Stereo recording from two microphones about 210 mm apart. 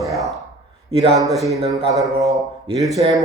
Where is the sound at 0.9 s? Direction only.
30° right (ahead or behind).